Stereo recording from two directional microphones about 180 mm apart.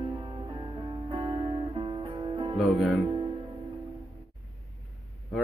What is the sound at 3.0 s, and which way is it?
Music, 25° right (ahead or behind).